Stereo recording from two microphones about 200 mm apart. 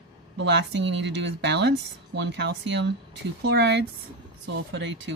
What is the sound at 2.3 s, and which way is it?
Speech, 60° right (ahead or behind).